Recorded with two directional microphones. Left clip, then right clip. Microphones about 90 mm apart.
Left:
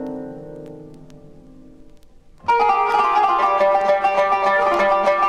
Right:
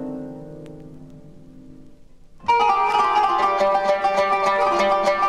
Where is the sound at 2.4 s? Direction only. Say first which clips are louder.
Left 1 dB; 35° left (ahead or behind).